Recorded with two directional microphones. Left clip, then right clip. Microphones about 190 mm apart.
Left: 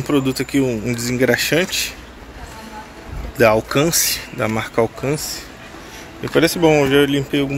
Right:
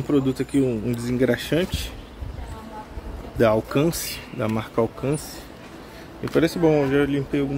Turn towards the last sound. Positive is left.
turn(degrees=25)  # may be behind; listen again after turning